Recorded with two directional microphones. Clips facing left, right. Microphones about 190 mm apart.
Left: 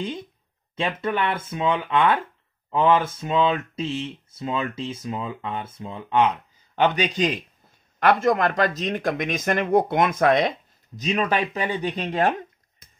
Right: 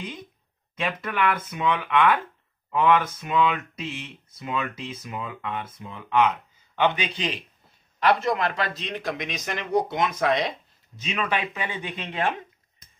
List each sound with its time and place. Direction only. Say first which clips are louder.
0.7 s speech: left 3 dB; 30° left (ahead or behind)
6.7 s speech: left 3 dB; 45° left (ahead or behind)
11.0 s speech: left 5 dB; 40° left (ahead or behind)